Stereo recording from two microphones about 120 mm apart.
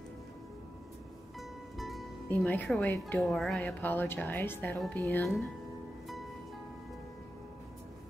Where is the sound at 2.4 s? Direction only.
10° left (ahead or behind).